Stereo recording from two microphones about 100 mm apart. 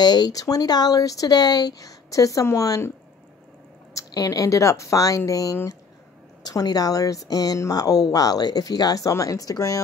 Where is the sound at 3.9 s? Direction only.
35° left (ahead or behind).